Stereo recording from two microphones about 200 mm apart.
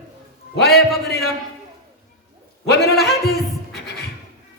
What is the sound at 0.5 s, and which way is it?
Speech, 55° left (ahead or behind).